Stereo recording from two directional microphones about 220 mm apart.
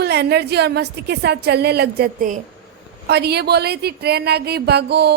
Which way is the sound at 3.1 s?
45° right (ahead or behind).